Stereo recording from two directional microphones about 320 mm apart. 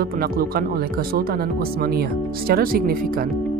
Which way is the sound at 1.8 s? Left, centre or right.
Right.